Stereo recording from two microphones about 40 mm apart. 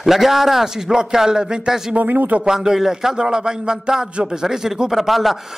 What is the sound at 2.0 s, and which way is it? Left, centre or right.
Speech, right.